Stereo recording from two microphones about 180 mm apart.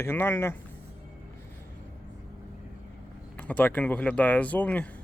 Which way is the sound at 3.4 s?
10° left (ahead or behind).